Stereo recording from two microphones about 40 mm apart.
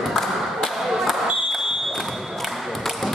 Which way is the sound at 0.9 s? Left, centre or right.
Centre.